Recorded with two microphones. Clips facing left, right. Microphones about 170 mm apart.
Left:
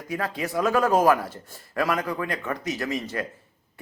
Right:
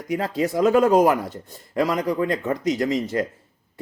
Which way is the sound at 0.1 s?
25° right (ahead or behind).